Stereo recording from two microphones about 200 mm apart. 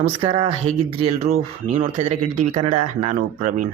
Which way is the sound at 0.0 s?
25° right (ahead or behind).